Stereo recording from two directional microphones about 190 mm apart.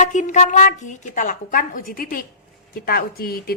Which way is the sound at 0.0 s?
40° left (ahead or behind).